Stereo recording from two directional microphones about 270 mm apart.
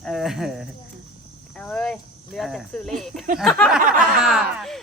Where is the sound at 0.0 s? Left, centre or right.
Centre.